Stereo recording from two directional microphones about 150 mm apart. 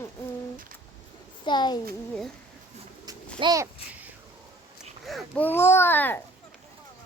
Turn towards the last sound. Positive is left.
turn(degrees=15)  # may be behind; listen again after turning